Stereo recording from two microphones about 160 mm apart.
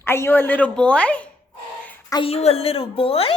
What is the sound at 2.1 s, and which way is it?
A woman's voice, 35° left (ahead or behind).